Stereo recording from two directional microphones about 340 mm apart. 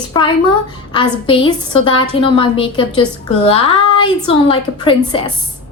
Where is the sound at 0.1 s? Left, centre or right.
Centre.